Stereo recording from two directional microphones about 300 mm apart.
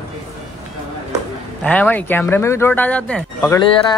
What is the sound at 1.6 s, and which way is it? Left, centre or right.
Speech, centre.